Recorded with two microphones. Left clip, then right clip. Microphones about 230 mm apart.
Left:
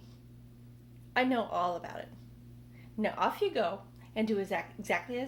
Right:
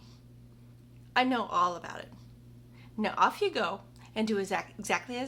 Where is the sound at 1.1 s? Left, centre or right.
Centre.